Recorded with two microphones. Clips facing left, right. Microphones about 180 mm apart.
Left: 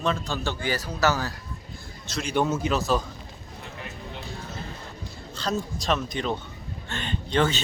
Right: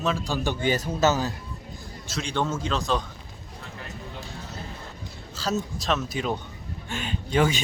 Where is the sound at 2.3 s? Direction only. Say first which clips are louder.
Left 3 dB; 10° left (ahead or behind).